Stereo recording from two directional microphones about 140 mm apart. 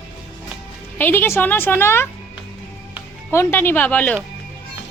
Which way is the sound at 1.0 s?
15° left (ahead or behind).